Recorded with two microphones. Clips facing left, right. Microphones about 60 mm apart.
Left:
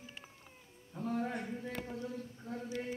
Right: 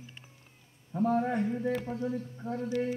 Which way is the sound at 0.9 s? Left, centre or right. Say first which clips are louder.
Right 9 dB; right.